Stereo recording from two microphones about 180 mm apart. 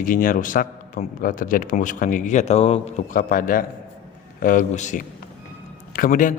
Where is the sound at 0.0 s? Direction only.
50° left (ahead or behind).